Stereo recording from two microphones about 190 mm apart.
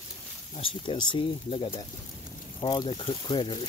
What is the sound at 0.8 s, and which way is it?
Speech, 25° left (ahead or behind).